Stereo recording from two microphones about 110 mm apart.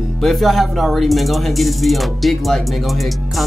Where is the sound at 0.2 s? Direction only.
Centre (ahead or behind).